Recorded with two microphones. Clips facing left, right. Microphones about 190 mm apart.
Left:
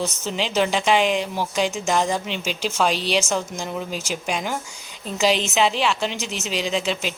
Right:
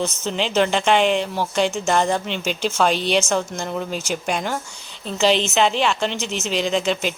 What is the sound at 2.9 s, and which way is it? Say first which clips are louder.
Speech: right 3 dB; 35° left (ahead or behind).